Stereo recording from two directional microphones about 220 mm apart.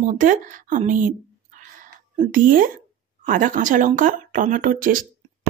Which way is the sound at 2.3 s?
40° right (ahead or behind).